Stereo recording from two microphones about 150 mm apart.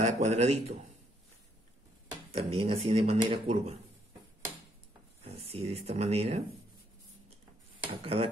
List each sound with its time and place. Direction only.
0.0 s a man's voice: 50° right (ahead or behind)
2.3 s speech: 40° right (ahead or behind)
5.2 s speech: 40° right (ahead or behind)
8.0 s speech: 40° right (ahead or behind)